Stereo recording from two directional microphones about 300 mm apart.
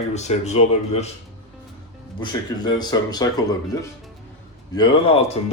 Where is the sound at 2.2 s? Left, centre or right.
Centre.